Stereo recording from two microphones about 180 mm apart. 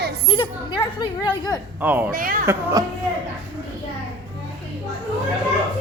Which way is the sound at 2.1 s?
50° right (ahead or behind).